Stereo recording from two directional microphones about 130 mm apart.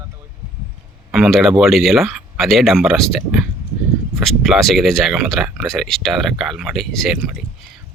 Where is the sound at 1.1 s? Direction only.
Centre (ahead or behind).